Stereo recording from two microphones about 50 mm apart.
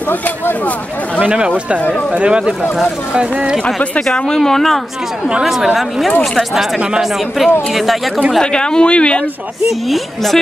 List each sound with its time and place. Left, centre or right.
0.1 s a man's voice: left
1.2 s speech: right
1.8 s speech: left
2.1 s speech: right
4.0 s speech: centre
5.4 s a woman's voice: centre
8.4 s speech: centre
9.7 s a woman's voice: centre